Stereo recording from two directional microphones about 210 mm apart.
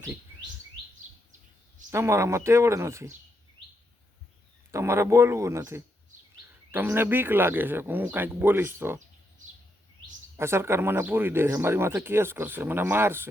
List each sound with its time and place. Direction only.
1.9 s speech: 15° right (ahead or behind)
4.7 s speech: 15° right (ahead or behind)
10.3 s speech: 10° right (ahead or behind)